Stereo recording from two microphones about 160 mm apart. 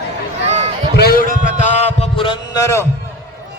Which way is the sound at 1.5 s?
45° left (ahead or behind).